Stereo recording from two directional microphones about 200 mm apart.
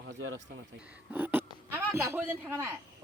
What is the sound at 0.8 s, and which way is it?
A man's voice, 10° right (ahead or behind).